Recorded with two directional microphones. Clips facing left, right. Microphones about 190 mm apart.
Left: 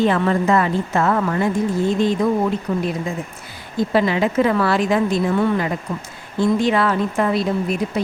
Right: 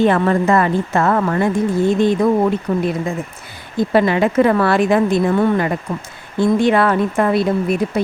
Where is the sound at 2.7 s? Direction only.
60° right (ahead or behind).